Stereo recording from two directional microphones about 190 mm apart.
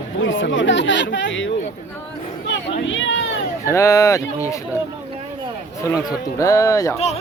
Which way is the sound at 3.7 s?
15° left (ahead or behind).